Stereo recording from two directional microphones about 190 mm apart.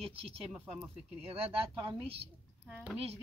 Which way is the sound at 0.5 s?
5° right (ahead or behind).